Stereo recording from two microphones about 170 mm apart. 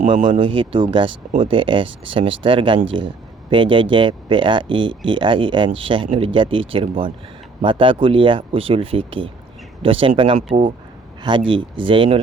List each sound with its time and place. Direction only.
0.3 s speech: 30° right (ahead or behind)